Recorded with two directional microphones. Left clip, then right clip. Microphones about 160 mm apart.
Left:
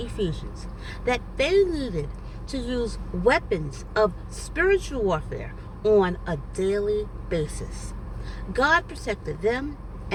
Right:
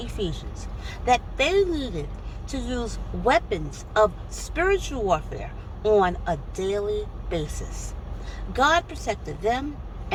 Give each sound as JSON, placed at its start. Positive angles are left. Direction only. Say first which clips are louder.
{"t": 0.0, "sound": "speech", "louder": "left 1 dB", "side_deg": 15}
{"t": 8.5, "sound": "speech", "louder": "right 1 dB", "side_deg": 15}